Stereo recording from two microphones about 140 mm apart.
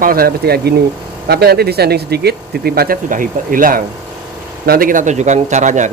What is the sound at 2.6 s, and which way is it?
Speech, 90° right.